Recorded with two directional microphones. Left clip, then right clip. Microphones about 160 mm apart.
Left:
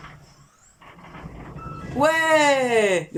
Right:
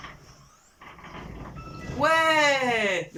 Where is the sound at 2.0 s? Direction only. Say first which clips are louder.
Left 3 dB; 45° left (ahead or behind).